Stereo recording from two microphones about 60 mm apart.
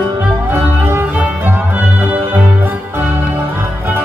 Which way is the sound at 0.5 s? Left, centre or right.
Right.